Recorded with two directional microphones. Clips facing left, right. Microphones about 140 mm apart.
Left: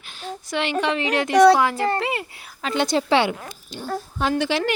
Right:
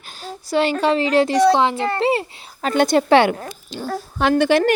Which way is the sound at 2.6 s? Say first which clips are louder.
Right 5 dB; 50° right (ahead or behind).